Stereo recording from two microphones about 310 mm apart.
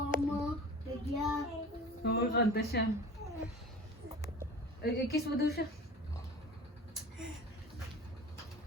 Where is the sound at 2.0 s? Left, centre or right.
Left.